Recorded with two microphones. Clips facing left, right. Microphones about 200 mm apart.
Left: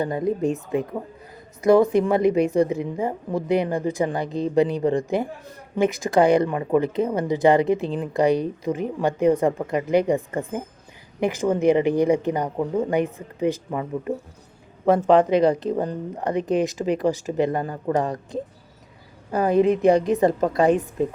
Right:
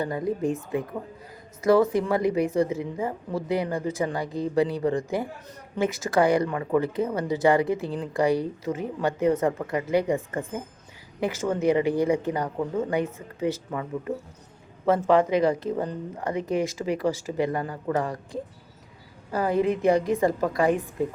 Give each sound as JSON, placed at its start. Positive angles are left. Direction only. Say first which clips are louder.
{"t": 0.0, "sound": "speech", "louder": "left 4 dB", "side_deg": 25}
{"t": 11.2, "sound": "a woman's voice", "louder": "left 4 dB", "side_deg": 15}